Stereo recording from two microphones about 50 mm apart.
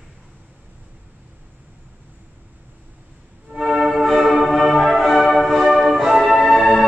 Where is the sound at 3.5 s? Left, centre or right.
Centre.